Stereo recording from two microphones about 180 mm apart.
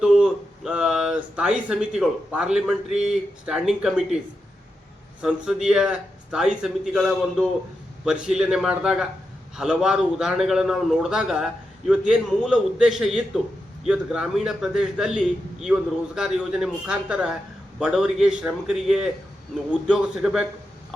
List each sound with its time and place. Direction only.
0.0 s speech: 5° right (ahead or behind)
5.2 s a man's voice: 5° right (ahead or behind)